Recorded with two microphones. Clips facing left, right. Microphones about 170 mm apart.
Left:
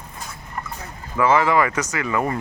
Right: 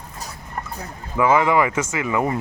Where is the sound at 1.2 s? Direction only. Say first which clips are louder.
Right 1 dB; 15° right (ahead or behind).